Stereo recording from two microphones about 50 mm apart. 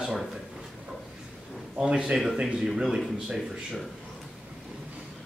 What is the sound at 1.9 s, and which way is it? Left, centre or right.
A man's voice, centre.